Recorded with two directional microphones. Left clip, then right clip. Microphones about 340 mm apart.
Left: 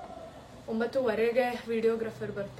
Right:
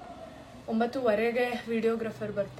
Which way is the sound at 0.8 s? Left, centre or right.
Centre.